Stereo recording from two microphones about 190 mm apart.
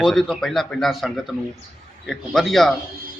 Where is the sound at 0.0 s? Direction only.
Centre (ahead or behind).